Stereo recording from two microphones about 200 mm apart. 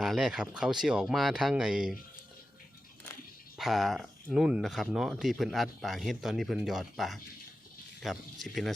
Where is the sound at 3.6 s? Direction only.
Centre (ahead or behind).